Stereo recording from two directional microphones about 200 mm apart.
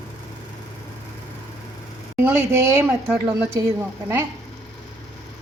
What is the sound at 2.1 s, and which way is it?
Speech, 10° right (ahead or behind).